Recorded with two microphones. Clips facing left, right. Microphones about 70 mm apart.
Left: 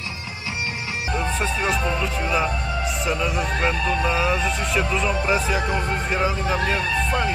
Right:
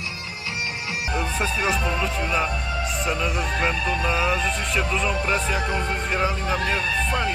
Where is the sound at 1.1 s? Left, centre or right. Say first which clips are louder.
Left 1 dB; centre.